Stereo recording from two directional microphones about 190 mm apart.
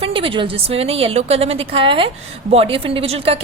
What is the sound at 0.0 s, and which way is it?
A woman's voice, 30° right (ahead or behind).